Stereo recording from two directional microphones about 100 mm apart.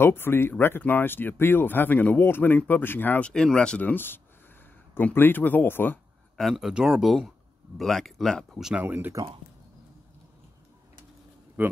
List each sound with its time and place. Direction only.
0.0 s speech: 20° left (ahead or behind)
6.3 s speech: centre (ahead or behind)
8.8 s speech: 20° right (ahead or behind)
11.6 s speech: 20° right (ahead or behind)